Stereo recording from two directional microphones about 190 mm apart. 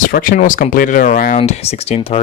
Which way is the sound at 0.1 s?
45° left (ahead or behind).